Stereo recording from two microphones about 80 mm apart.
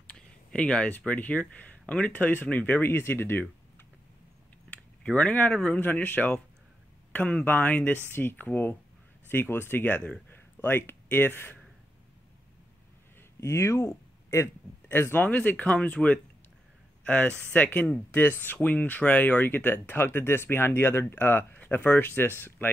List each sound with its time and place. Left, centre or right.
0.0 s a sound: centre
0.9 s speech: left
4.6 s speech: centre
5.8 s speech: left
13.4 s speech: left
14.9 s speech: left